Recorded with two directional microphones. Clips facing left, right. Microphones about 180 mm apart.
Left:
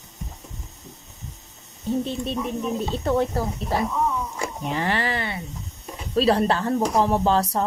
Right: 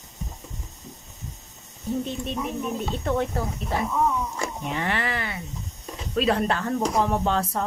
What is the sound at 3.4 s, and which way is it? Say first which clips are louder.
Speech: left 3 dB; 35° left (ahead or behind).